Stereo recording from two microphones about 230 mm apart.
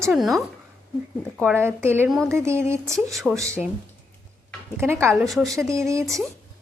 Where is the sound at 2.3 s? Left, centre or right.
Centre.